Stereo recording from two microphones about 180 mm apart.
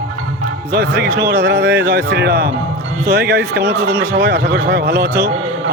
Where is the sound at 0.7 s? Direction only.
60° right (ahead or behind).